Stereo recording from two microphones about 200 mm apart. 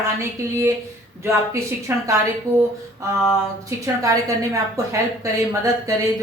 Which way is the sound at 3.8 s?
15° right (ahead or behind).